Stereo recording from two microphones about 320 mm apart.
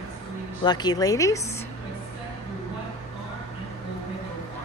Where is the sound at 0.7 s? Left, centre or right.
Centre.